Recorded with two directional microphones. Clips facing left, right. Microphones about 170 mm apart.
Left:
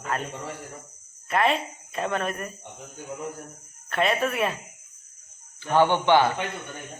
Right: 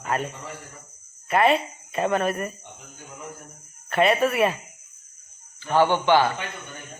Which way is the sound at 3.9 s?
5° right (ahead or behind).